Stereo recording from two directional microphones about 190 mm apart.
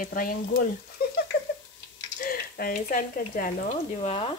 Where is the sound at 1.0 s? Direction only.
55° left (ahead or behind).